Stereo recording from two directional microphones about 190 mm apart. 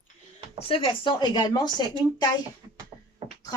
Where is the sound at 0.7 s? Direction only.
25° left (ahead or behind).